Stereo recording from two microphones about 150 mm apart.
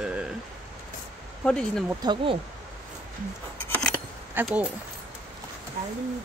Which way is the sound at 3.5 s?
15° left (ahead or behind).